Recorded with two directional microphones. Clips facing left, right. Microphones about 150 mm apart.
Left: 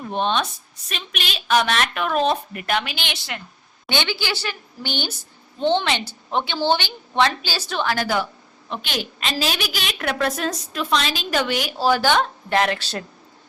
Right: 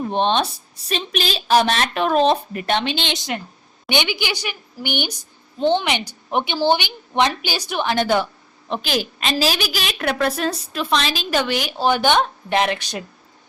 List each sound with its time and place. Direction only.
0.0 s a woman's voice: 30° right (ahead or behind); by 13.1 s 15° right (ahead or behind)